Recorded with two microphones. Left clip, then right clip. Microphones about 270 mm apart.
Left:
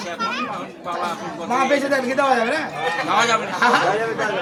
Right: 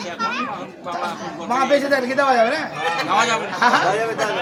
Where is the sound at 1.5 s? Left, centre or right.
Centre.